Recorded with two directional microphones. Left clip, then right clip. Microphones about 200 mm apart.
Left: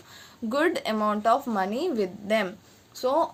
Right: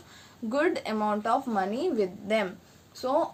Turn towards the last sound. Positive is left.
turn(degrees=45)  # may be behind; listen again after turning